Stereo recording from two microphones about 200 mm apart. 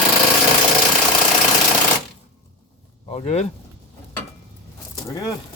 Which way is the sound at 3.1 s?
30° left (ahead or behind).